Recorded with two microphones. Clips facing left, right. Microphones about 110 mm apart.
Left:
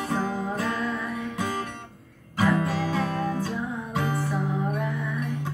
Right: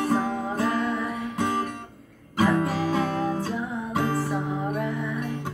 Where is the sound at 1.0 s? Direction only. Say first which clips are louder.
Right 2 dB; 5° right (ahead or behind).